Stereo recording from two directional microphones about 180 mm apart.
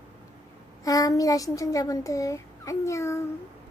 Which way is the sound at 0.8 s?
20° left (ahead or behind).